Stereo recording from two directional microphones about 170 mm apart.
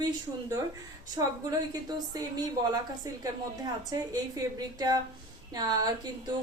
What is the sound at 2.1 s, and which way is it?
Speech, 25° right (ahead or behind).